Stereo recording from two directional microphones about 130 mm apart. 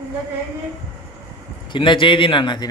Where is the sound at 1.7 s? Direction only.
40° left (ahead or behind).